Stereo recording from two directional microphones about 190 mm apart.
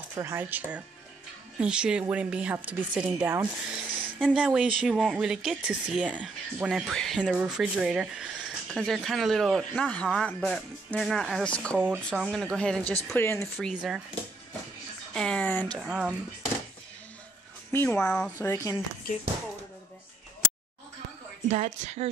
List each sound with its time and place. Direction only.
0.1 s a woman's voice: 15° right (ahead or behind)
15.1 s a woman's voice: 5° left (ahead or behind)
15.8 s a woman's voice: 5° right (ahead or behind)
17.6 s speech: 10° left (ahead or behind)
21.5 s a woman's voice: 35° right (ahead or behind)